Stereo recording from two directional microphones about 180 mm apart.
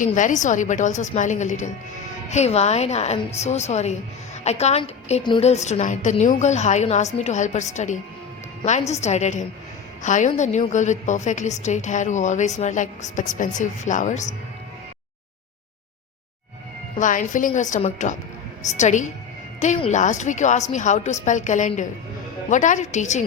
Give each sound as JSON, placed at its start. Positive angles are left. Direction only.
{"t": 0.0, "sound": "a woman's voice", "side_deg": 45}
{"t": 17.0, "sound": "a woman's voice", "side_deg": 45}